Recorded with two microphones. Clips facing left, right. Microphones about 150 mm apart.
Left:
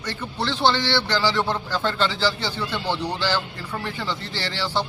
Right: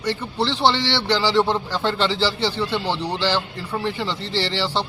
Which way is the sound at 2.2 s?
30° right (ahead or behind).